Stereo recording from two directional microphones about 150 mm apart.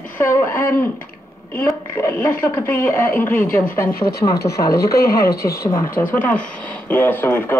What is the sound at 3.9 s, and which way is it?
Speech, 90° left.